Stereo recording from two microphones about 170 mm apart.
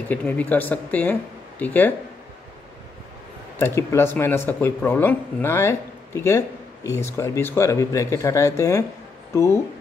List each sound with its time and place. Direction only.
0.1 s speech: 10° left (ahead or behind)
3.5 s speech: 15° left (ahead or behind)